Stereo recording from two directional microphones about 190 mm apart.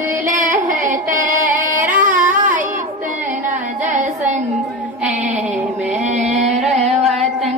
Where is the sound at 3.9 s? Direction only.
40° right (ahead or behind).